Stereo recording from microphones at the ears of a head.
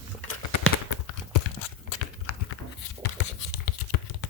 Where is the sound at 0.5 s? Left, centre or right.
Left.